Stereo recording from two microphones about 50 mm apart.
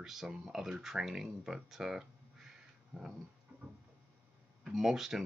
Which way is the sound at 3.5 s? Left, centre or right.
Centre.